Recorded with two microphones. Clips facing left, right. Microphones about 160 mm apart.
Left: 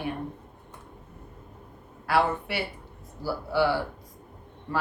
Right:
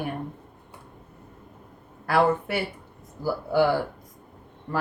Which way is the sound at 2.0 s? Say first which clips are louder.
Right 3 dB; 45° right (ahead or behind).